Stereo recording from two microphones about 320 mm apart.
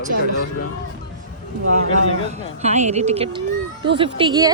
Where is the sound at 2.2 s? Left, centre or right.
Right.